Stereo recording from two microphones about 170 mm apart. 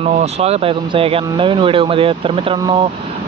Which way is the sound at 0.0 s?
40° right (ahead or behind).